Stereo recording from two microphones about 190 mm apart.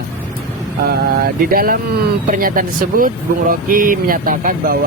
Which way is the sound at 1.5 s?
50° right (ahead or behind).